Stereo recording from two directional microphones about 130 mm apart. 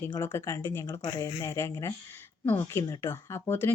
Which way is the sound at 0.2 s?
20° left (ahead or behind).